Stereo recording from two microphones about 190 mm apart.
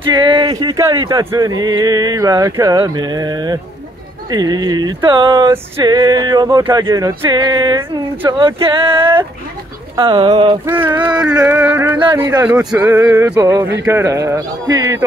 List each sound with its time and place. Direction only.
0.0 s speech: 25° right (ahead or behind)
10.6 s speech: 15° right (ahead or behind)
12.4 s speech: 10° right (ahead or behind)